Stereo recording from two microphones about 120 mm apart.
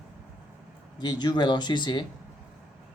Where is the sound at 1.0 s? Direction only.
35° left (ahead or behind).